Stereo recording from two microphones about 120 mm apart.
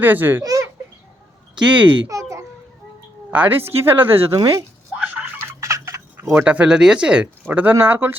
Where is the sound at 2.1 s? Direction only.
30° right (ahead or behind).